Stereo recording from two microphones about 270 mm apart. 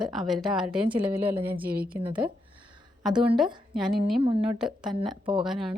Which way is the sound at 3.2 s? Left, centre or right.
Centre.